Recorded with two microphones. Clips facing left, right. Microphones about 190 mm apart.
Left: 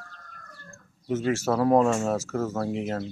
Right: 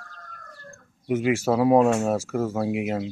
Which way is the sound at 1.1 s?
15° right (ahead or behind).